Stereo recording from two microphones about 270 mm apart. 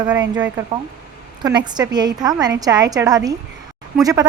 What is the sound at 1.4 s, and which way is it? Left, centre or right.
A woman's voice, centre.